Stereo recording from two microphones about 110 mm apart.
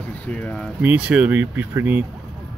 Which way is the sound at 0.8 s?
10° right (ahead or behind).